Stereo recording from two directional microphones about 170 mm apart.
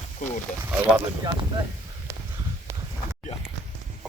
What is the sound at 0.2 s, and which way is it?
Speech, 55° left (ahead or behind).